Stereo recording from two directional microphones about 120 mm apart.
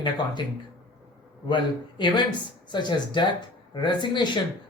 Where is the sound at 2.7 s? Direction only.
40° left (ahead or behind).